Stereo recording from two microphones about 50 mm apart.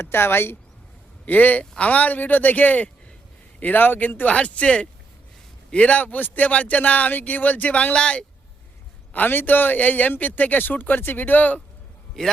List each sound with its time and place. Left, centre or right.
0.0 s speech: left
1.2 s speech: left
4.4 s speech: left
9.1 s speech: left
12.2 s a man's voice: centre